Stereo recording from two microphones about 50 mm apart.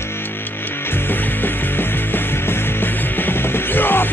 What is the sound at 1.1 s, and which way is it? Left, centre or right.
Music, left.